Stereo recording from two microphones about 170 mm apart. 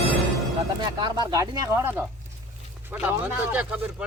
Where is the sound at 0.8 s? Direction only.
25° right (ahead or behind); by 4.1 s 10° right (ahead or behind).